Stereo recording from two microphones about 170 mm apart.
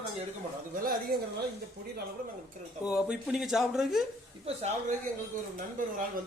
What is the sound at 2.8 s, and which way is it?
Speech, 5° right (ahead or behind).